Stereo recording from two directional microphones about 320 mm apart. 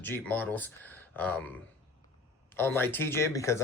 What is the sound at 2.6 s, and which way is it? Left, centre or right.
Speech, centre.